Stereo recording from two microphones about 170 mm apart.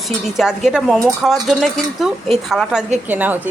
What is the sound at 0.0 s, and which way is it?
A woman's voice, centre (ahead or behind).